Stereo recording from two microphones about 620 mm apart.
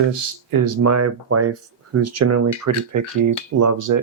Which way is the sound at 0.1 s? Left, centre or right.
Right.